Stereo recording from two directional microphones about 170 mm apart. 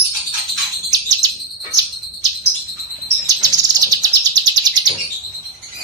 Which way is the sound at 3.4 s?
20° right (ahead or behind).